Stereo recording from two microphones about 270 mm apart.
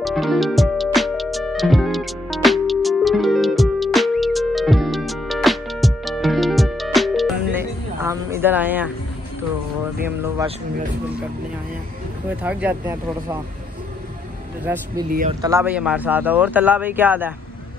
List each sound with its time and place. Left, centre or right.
0.0 s music: centre
12.4 s speech: centre
14.6 s speech: centre